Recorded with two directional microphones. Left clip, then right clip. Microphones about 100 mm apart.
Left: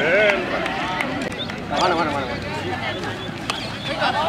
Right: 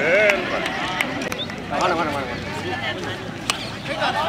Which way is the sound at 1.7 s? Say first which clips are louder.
Left 1 dB; centre (ahead or behind).